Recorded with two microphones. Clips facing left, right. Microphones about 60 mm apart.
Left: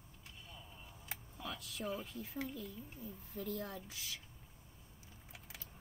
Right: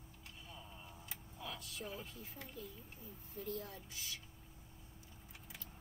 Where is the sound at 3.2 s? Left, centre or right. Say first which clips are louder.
Left 2 dB; left.